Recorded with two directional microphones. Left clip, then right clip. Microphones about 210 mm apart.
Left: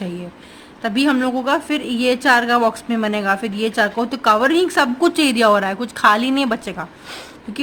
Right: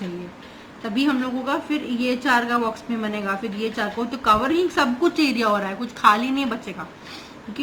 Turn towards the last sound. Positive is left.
turn(degrees=60)  # may be behind; listen again after turning